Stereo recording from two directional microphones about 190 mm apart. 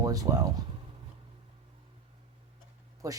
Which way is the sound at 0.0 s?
20° right (ahead or behind).